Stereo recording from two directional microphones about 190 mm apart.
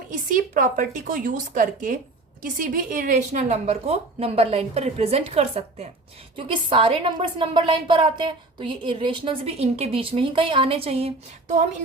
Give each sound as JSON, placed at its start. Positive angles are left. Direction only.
{"t": 0.1, "sound": "a woman's voice", "side_deg": -45}